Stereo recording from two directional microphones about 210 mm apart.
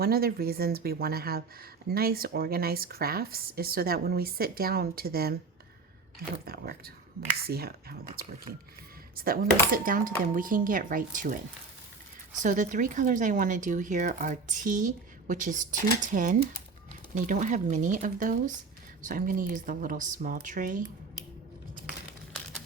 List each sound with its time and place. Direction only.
0.0 s speech: 45° right (ahead or behind)
6.4 s speech: 45° right (ahead or behind)
12.4 s speech: 35° right (ahead or behind)